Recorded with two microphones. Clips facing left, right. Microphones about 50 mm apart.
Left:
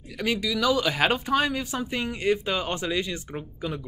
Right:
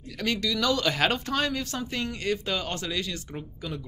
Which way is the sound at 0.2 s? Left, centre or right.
Centre.